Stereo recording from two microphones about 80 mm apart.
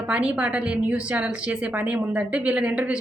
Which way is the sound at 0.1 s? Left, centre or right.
Centre.